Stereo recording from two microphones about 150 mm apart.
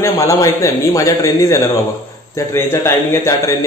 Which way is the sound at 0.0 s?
20° left (ahead or behind).